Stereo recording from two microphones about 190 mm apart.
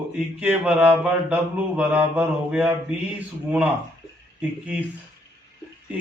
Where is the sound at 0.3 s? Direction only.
10° right (ahead or behind).